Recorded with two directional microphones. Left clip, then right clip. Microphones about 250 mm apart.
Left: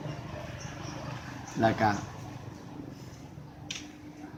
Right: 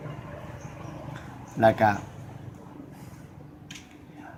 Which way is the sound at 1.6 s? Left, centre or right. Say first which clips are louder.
Right 6 dB; right.